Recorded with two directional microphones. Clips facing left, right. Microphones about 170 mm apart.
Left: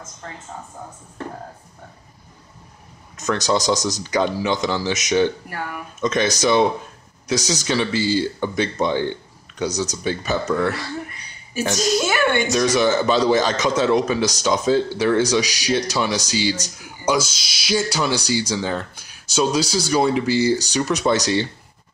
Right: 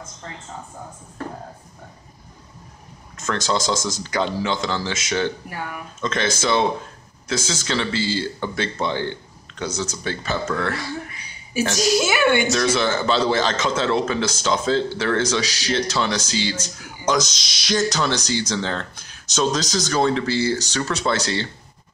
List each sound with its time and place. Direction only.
3.2 s speech: 15° left (ahead or behind)
12.4 s speech: 15° left (ahead or behind)